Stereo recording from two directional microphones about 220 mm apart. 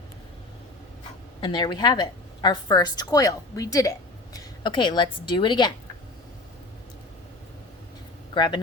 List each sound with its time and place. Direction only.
1.4 s a woman's voice: 20° left (ahead or behind)
8.3 s speech: 20° left (ahead or behind)